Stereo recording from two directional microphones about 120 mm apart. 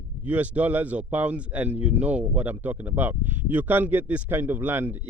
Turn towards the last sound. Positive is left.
turn(degrees=-15)  # may be behind; listen again after turning